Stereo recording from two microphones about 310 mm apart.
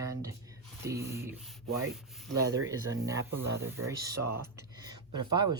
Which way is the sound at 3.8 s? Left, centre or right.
Right.